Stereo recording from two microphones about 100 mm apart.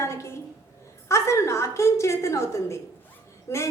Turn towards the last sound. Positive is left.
turn(degrees=30)  # may be behind; listen again after turning